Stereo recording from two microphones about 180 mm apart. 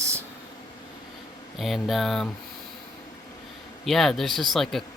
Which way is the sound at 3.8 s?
Centre (ahead or behind).